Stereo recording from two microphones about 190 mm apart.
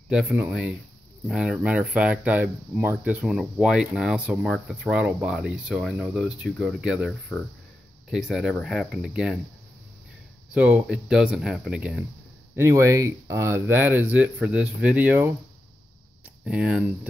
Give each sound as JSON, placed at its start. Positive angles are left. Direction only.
{"t": 0.1, "sound": "speech", "side_deg": -5}
{"t": 10.5, "sound": "speech", "side_deg": -5}
{"t": 12.5, "sound": "speech", "side_deg": -15}
{"t": 16.4, "sound": "speech", "side_deg": -5}